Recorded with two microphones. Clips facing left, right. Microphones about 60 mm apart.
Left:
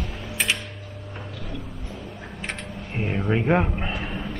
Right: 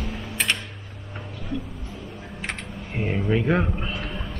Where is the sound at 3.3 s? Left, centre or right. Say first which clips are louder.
Left 2 dB; left.